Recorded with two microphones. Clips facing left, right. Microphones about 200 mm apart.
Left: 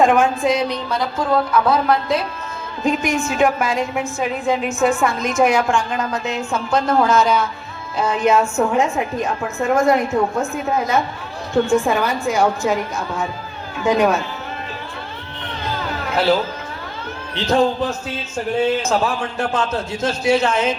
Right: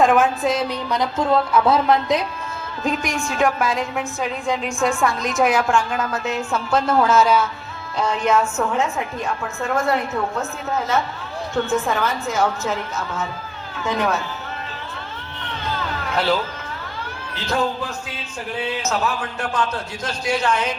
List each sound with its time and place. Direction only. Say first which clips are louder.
0.0 s a woman's voice: left 2 dB; centre (ahead or behind)
0.9 s speech: even; 20° right (ahead or behind)
2.8 s a woman's voice: left 4 dB; centre (ahead or behind)
7.9 s a woman's voice: left 3 dB; 10° left (ahead or behind)
17.3 s speech: left 6 dB; 30° left (ahead or behind)
18.3 s speech: left 8 dB; 45° left (ahead or behind)
18.8 s a man's voice: left 4 dB; 30° left (ahead or behind)